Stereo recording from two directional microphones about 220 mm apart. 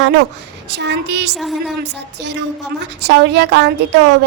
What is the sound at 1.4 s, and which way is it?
Speech, centre (ahead or behind).